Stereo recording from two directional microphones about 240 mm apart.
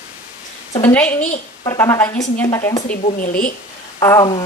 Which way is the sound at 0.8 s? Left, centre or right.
Centre.